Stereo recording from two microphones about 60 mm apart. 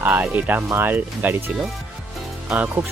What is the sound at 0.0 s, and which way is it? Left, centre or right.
Speech, right.